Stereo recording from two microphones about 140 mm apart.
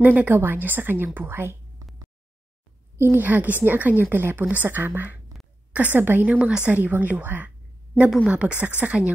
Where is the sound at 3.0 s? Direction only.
15° right (ahead or behind).